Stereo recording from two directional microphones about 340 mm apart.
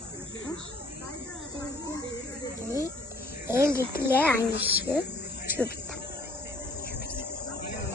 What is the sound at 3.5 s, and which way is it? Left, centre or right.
Speech, left.